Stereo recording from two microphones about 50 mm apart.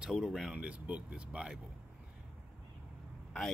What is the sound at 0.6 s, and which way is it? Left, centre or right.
Speech, right.